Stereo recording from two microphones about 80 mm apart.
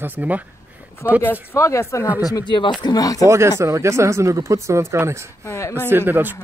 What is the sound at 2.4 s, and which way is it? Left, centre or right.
Speech, left.